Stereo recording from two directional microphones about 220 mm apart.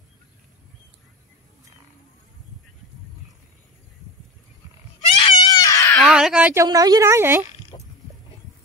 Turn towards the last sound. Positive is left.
turn(degrees=20)  # may be behind; listen again after turning